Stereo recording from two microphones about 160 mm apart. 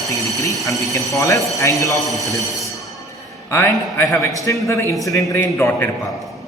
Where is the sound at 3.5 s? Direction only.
15° left (ahead or behind).